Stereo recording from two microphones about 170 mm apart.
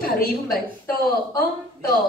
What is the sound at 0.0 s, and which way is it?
Speech, 60° left (ahead or behind).